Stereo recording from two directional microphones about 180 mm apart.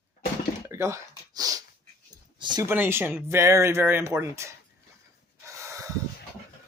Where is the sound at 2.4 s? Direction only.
25° right (ahead or behind).